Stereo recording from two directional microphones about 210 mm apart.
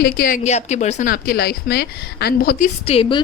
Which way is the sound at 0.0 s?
45° left (ahead or behind).